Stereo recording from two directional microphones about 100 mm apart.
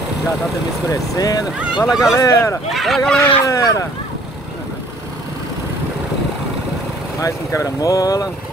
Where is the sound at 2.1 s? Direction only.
30° left (ahead or behind).